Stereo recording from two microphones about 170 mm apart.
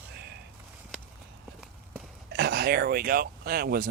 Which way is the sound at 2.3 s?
70° right (ahead or behind).